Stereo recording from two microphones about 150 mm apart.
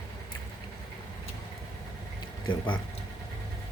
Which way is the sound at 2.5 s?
35° left (ahead or behind).